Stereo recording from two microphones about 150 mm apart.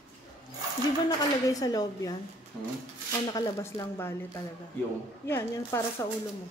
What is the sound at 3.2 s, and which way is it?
Speech, 30° left (ahead or behind).